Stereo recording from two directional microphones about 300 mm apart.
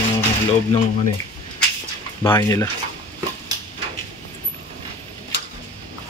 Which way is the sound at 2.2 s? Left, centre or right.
Centre.